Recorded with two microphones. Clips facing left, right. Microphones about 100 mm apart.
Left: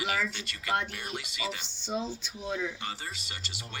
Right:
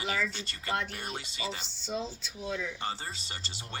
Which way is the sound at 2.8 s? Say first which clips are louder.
Right 2 dB; 30° right (ahead or behind).